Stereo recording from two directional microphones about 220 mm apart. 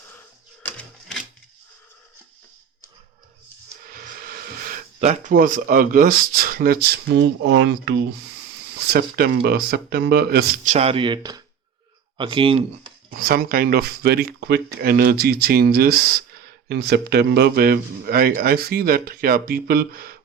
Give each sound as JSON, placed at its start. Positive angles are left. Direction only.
{"t": 0.6, "sound": "a sound", "side_deg": 5}
{"t": 3.8, "sound": "speech", "side_deg": -40}
{"t": 13.1, "sound": "speech", "side_deg": -40}